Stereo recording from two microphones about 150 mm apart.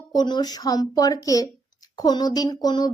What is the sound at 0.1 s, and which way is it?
A woman's voice, 30° left (ahead or behind).